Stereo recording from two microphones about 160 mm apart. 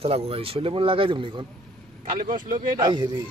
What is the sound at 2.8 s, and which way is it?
Speech, 30° right (ahead or behind).